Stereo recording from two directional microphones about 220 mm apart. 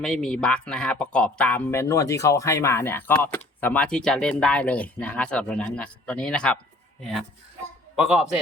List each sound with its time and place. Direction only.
0.0 s speech: centre (ahead or behind)